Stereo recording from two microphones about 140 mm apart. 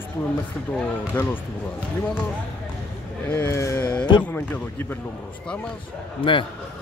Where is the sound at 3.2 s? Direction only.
10° left (ahead or behind); by 4.2 s 30° left (ahead or behind).